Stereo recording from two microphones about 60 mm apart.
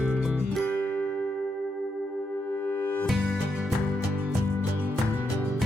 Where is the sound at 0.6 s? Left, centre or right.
Left.